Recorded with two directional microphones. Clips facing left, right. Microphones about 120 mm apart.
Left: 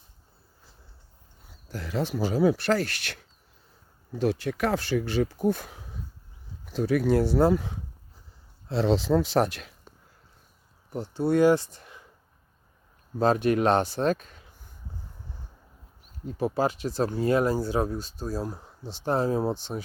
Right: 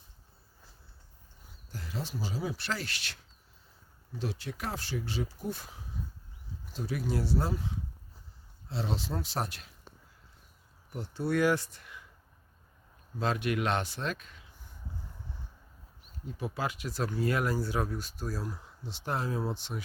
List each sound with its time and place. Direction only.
1.7 s speech: 80° left; by 7.8 s 65° left (ahead or behind)
8.7 s speech: 85° left
10.9 s speech: 30° left (ahead or behind)
13.1 s speech: 40° left (ahead or behind)
16.2 s speech: 35° left (ahead or behind)